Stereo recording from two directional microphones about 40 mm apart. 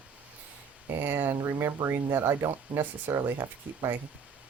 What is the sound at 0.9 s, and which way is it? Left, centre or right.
Speech, right.